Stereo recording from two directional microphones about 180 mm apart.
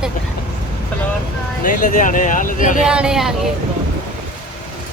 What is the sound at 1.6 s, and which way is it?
Speech, 50° left (ahead or behind).